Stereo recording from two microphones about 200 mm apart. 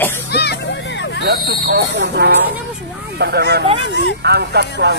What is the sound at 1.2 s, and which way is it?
Speech, 55° right (ahead or behind).